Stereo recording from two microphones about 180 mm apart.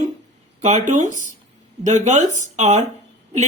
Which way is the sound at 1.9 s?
45° right (ahead or behind).